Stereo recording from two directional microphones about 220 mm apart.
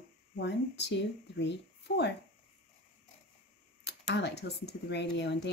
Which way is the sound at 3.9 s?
50° left (ahead or behind).